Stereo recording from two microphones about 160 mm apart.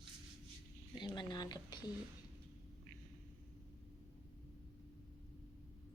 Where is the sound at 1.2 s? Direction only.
25° left (ahead or behind).